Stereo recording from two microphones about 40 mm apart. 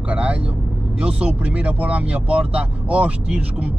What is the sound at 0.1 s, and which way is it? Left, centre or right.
Vehicle, right.